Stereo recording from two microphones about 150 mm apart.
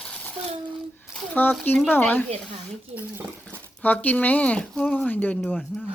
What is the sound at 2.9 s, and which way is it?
Speech, 15° right (ahead or behind).